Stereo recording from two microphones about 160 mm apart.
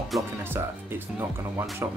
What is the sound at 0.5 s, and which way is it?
Speech, 15° right (ahead or behind).